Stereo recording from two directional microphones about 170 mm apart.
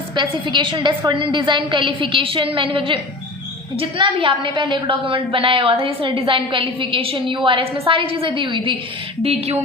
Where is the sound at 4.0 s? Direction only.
30° right (ahead or behind).